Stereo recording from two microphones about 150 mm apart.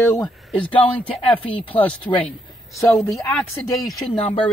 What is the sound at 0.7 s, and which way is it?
Speech, 35° left (ahead or behind).